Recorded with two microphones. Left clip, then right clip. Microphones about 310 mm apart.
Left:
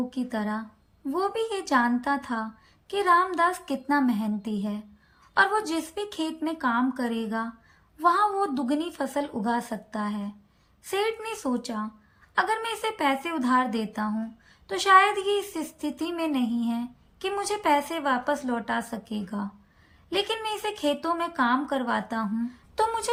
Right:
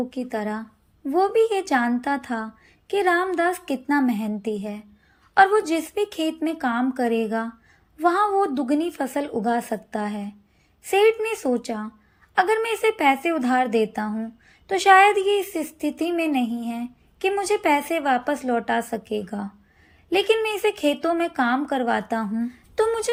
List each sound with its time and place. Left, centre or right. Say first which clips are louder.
0.1 s a woman's voice: right 3 dB; centre